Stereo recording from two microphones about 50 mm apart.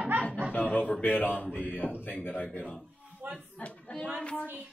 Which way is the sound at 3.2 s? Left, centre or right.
Right.